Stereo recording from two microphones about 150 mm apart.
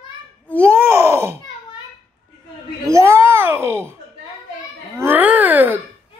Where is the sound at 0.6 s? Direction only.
15° right (ahead or behind).